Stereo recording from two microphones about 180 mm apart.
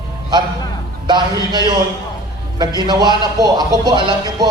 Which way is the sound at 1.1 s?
25° right (ahead or behind).